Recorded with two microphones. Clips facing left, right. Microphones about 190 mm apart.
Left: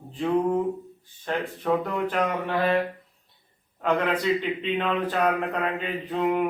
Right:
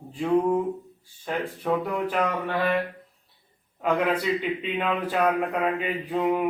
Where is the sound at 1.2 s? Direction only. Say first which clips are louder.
Left 1 dB; 5° right (ahead or behind).